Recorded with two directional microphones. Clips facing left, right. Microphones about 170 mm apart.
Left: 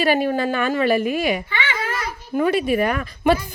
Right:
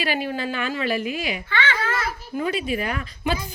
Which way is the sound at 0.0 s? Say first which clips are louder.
Left 7 dB; 50° left (ahead or behind).